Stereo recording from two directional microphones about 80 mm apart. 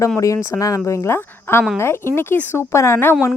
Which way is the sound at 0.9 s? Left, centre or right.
Left.